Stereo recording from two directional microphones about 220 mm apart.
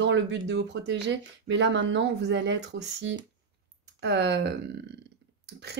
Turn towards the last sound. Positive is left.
turn(degrees=-50)  # may be behind; listen again after turning